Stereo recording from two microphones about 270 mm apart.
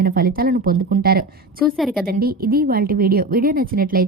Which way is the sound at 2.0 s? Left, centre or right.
Right.